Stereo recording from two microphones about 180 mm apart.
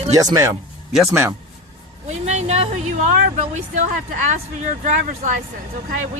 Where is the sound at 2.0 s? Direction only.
40° right (ahead or behind).